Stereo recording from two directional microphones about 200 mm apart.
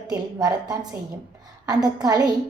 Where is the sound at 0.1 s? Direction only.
20° right (ahead or behind).